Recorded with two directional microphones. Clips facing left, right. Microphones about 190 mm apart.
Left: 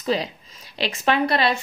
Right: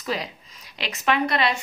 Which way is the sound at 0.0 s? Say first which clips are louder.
Left 5 dB; 30° left (ahead or behind).